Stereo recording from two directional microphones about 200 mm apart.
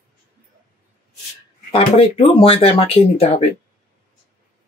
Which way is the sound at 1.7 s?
25° left (ahead or behind).